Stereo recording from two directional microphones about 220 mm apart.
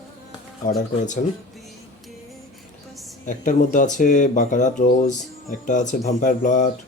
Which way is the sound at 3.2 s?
35° left (ahead or behind).